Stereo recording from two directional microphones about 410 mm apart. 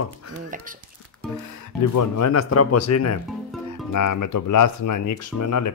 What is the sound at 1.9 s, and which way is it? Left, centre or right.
Speech, left.